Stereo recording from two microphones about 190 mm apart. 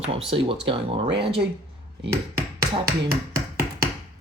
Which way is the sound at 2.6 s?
50° right (ahead or behind).